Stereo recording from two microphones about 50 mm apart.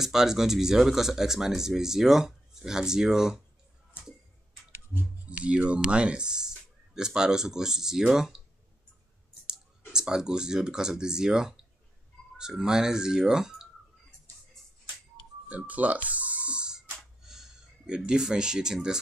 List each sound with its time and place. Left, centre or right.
0.0 s speech: centre
5.3 s speech: right
9.5 s speech: centre
15.4 s music: right
16.9 s a sound: centre
17.9 s speech: centre